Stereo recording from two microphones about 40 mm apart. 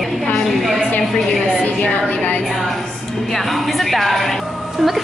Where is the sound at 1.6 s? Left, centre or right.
Left.